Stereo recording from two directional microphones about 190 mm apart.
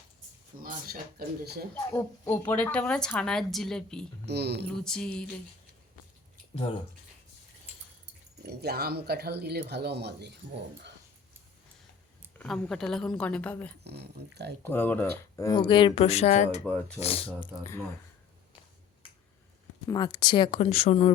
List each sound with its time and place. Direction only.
1.2 s speech: 55° right (ahead or behind)
1.7 s a woman's voice: 10° left (ahead or behind)
4.3 s speech: 60° right (ahead or behind)
4.6 s a woman's voice: 5° left (ahead or behind)
8.4 s speech: 55° right (ahead or behind)
12.4 s a woman's voice: 5° left (ahead or behind)
13.8 s speech: 60° right (ahead or behind)
14.6 s speech: 10° left (ahead or behind); by 16.6 s 40° left (ahead or behind)
16.6 s speech: 5° left (ahead or behind)
17.0 s speech: 30° left (ahead or behind)
17.4 s speech: 15° left (ahead or behind)
19.9 s speech: 20° left (ahead or behind)